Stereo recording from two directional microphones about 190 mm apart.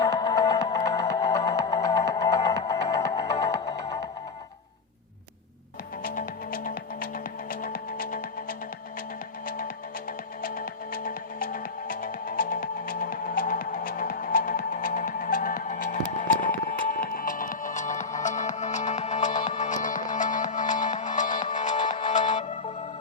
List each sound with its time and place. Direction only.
0.0 s music: 20° left (ahead or behind)
6.0 s music: 45° left (ahead or behind)
9.6 s music: 50° left (ahead or behind)